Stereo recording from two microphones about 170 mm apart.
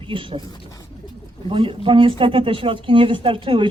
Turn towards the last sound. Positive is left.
turn(degrees=-30)  # may be behind; listen again after turning